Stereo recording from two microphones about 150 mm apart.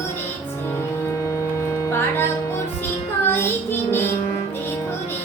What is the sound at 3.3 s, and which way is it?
Child singing, 15° left (ahead or behind).